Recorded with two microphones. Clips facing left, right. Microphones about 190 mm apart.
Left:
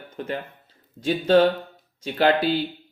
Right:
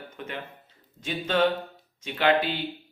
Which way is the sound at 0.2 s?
35° left (ahead or behind).